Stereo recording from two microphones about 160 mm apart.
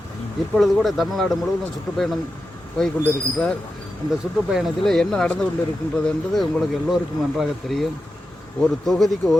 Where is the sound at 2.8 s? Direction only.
5° left (ahead or behind).